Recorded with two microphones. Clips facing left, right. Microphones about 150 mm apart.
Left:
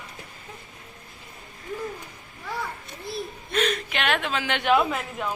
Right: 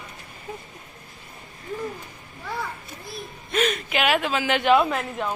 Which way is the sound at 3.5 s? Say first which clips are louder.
Right 2 dB; 5° right (ahead or behind).